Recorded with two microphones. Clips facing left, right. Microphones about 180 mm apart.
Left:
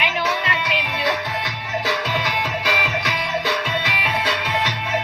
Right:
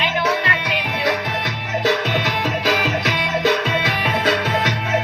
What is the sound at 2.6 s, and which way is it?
Music, 40° right (ahead or behind).